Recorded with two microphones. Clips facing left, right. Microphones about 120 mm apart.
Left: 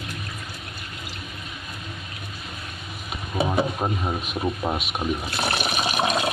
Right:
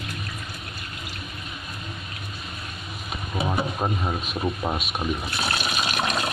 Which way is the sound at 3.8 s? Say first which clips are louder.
Even; 10° left (ahead or behind).